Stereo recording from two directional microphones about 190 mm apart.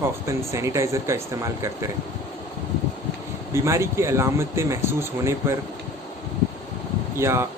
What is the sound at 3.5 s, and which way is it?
Speech, 15° right (ahead or behind).